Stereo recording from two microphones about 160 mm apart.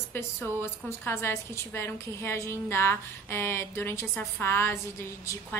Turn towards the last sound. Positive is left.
turn(degrees=15)  # may be behind; listen again after turning